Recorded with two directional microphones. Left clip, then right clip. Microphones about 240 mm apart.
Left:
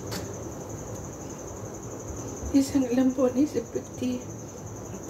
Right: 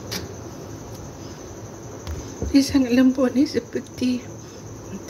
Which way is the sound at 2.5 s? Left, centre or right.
Right.